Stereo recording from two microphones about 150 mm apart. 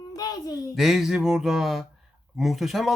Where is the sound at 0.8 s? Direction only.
Centre (ahead or behind).